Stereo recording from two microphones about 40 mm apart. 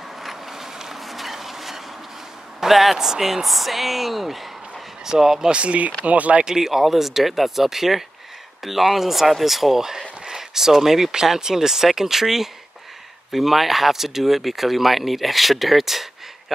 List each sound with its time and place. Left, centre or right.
0.2 s vehicle: centre
2.6 s speech: centre
5.5 s speech: right
6.4 s speech: centre